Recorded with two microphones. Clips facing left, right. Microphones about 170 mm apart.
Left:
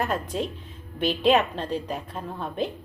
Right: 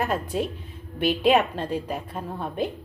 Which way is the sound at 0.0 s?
10° right (ahead or behind).